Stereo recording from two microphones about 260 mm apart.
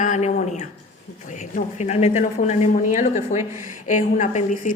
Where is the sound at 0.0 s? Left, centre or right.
Left.